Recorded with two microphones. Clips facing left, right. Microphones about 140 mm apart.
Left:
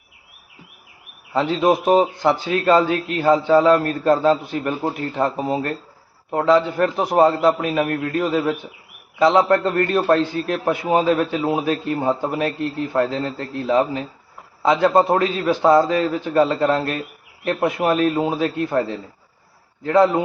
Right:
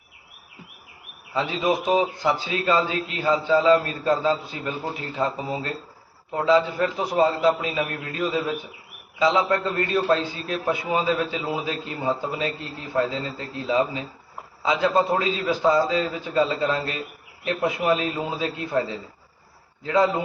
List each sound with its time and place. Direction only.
1.3 s a man's voice: 60° left (ahead or behind)